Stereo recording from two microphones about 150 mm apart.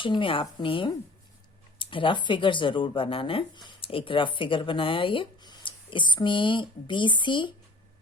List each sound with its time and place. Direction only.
0.0 s speech: 35° left (ahead or behind)